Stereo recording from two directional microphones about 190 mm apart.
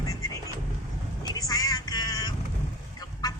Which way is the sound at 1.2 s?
20° left (ahead or behind).